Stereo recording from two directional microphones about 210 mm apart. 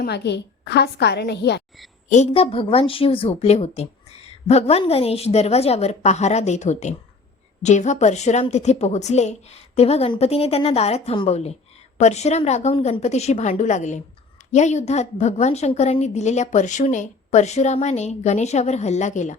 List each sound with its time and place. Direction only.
0.0 s a woman's voice: 55° left (ahead or behind)
2.0 s a woman's voice: 35° left (ahead or behind)